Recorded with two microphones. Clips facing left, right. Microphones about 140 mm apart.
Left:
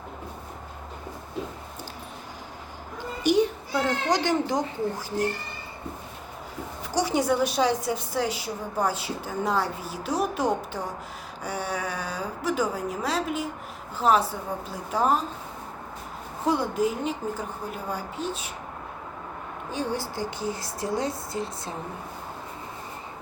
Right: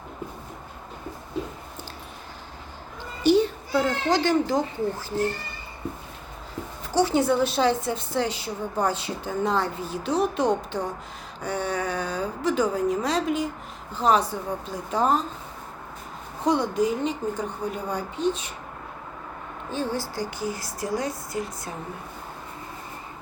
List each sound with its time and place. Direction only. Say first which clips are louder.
3.2 s a sound: right 2 dB; 15° left (ahead or behind)
4.1 s a woman's voice: right 3 dB; 20° left (ahead or behind)
6.9 s a woman's voice: right 3 dB; 15° left (ahead or behind)
16.5 s a woman's voice: right 2 dB; 5° left (ahead or behind)
19.7 s a woman's voice: right 1 dB; 15° left (ahead or behind)